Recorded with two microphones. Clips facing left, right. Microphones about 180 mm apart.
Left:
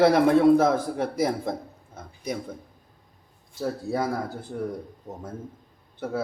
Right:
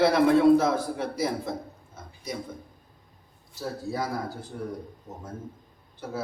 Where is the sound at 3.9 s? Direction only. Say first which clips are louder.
Left 3 dB; 55° left (ahead or behind).